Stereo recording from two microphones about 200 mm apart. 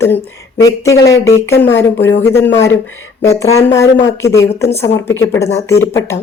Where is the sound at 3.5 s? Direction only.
90° left.